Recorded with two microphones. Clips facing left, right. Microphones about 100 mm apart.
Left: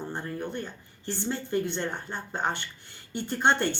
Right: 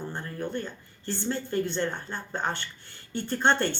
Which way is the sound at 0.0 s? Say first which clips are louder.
Left 1 dB; 20° left (ahead or behind).